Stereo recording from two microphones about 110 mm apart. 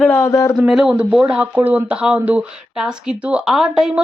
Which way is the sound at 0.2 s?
30° left (ahead or behind).